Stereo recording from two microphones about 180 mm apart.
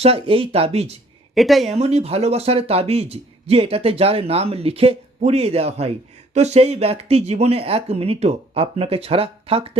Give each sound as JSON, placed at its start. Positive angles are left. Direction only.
{"t": 0.0, "sound": "speech", "side_deg": -30}
{"t": 1.4, "sound": "speech", "side_deg": 0}
{"t": 1.7, "sound": "speech", "side_deg": -35}